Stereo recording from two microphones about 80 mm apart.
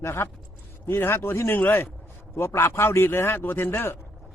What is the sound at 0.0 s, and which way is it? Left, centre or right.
A man's voice, left.